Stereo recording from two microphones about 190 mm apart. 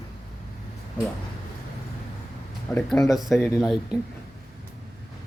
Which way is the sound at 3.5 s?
Centre (ahead or behind).